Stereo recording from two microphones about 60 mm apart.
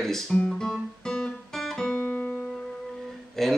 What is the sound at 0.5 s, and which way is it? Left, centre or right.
Guitar, centre.